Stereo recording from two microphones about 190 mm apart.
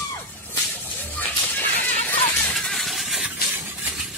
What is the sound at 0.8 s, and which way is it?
Music, 10° left (ahead or behind).